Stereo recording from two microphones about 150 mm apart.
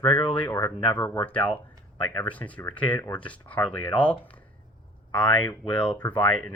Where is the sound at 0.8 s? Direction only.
10° left (ahead or behind).